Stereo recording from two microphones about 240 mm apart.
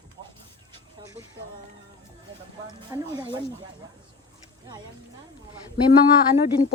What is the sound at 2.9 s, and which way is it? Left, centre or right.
Speech, centre.